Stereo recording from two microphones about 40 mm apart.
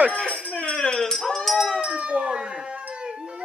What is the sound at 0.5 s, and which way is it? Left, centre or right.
Music, left.